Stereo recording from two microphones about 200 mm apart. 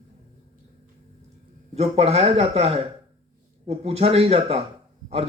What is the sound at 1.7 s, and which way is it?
A man's voice, 30° right (ahead or behind).